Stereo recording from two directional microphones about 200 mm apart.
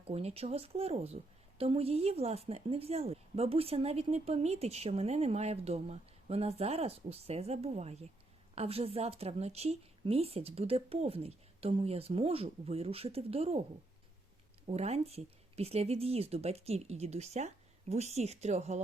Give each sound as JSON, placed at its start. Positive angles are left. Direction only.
{"t": 0.1, "sound": "a woman's voice", "side_deg": -30}
{"t": 14.7, "sound": "a woman's voice", "side_deg": -30}